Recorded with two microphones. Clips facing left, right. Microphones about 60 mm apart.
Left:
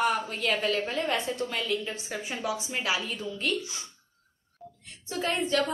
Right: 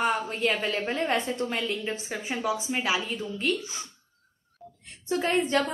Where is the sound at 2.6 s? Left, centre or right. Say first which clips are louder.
Right 2 dB; centre.